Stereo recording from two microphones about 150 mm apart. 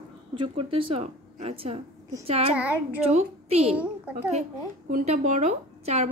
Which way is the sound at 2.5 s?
10° right (ahead or behind).